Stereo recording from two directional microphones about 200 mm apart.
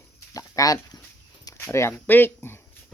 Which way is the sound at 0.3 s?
15° left (ahead or behind).